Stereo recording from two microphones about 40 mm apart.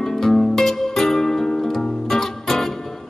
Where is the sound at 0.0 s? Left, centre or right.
Centre.